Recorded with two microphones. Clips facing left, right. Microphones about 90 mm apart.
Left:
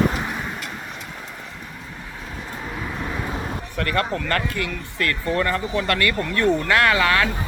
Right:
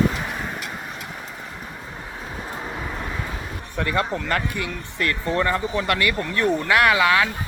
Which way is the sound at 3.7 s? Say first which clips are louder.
Even; 15° right (ahead or behind).